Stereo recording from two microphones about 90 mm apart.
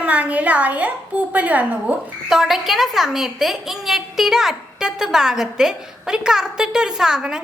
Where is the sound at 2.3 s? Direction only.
5° right (ahead or behind).